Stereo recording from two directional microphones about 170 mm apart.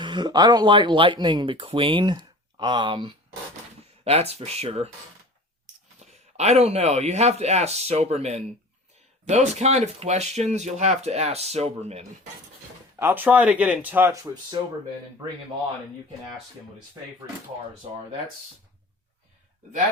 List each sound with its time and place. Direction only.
0.0 s speech: 25° right (ahead or behind)
6.0 s speech: 40° right (ahead or behind)
13.0 s speech: 10° right (ahead or behind)